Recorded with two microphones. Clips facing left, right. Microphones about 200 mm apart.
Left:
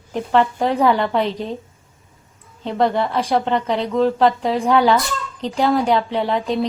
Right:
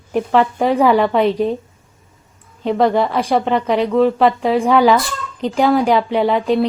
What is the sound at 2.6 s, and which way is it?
Speech, 80° right.